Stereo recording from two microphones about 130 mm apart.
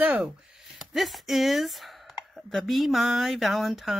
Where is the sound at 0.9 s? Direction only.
Centre (ahead or behind).